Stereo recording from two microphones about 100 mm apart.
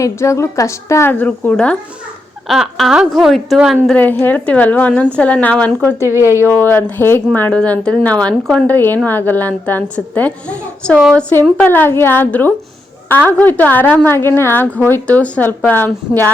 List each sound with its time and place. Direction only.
0.0 s a woman's voice: 30° left (ahead or behind)
1.1 s a woman's voice: 15° left (ahead or behind)
2.5 s speech: centre (ahead or behind)
3.9 s a woman's voice: 20° left (ahead or behind)
6.0 s speech: 25° right (ahead or behind)
6.5 s a woman's voice: 20° left (ahead or behind)
8.6 s a woman's voice: 20° left (ahead or behind)
11.6 s a woman's voice: 20° left (ahead or behind)